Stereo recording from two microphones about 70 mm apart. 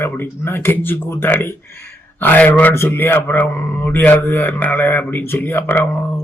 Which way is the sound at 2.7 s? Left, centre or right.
Left.